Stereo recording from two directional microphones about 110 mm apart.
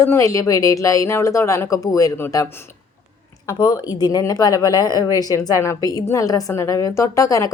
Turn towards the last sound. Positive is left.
turn(degrees=30)  # may be behind; listen again after turning